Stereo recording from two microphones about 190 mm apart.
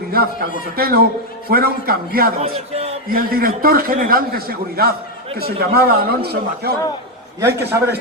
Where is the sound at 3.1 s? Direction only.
50° right (ahead or behind).